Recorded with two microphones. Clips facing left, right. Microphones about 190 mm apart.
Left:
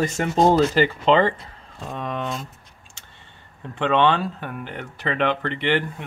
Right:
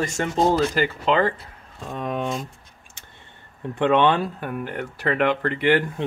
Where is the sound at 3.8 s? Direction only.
15° right (ahead or behind).